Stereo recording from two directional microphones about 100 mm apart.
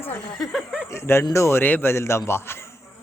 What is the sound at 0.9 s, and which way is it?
A man's voice, 25° left (ahead or behind).